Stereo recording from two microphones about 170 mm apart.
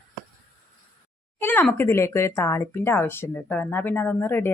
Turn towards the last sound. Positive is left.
turn(degrees=15)  # may be behind; listen again after turning